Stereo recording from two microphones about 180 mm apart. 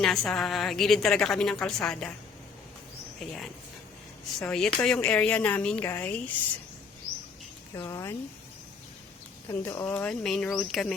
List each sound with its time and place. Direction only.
0.0 s a woman's voice: centre (ahead or behind)
3.2 s a woman's voice: centre (ahead or behind)
7.8 s a woman's voice: 15° left (ahead or behind)
9.5 s a woman's voice: 10° left (ahead or behind)